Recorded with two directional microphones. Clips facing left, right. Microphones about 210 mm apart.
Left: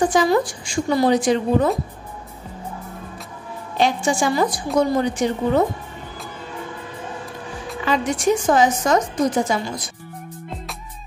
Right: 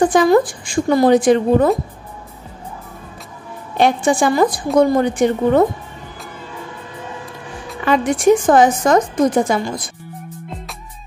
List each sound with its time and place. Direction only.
0.1 s a woman's voice: 55° right (ahead or behind)
3.7 s a woman's voice: 55° right (ahead or behind)
7.8 s a woman's voice: 55° right (ahead or behind)